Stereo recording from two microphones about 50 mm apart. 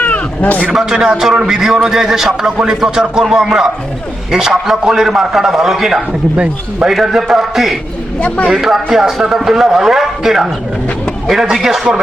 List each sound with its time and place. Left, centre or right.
0.0 s a sound: left
0.7 s a man's voice: centre
6.3 s speech: right
6.8 s a man's voice: centre